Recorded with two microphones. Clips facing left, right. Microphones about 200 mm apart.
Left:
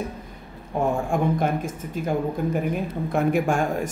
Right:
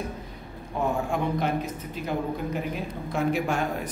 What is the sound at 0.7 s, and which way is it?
Speech, 50° left (ahead or behind).